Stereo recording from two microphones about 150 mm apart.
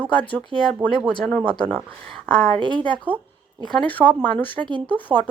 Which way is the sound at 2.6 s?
30° right (ahead or behind).